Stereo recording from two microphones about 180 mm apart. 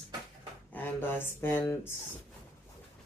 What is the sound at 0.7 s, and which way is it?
Speech, 10° left (ahead or behind).